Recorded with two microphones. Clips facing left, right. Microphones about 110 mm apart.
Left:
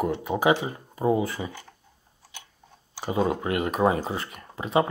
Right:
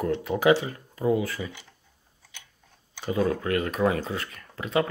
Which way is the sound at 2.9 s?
25° left (ahead or behind).